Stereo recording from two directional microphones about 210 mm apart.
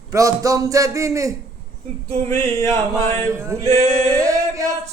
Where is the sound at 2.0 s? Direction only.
30° right (ahead or behind).